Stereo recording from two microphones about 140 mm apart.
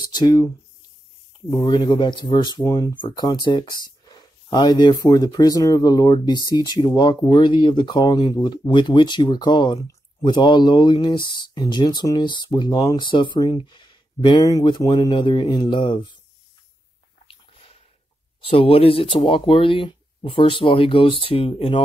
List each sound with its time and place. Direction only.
0.0 s speech: 30° left (ahead or behind)
1.5 s speech: 35° left (ahead or behind)
18.4 s speech: 40° left (ahead or behind)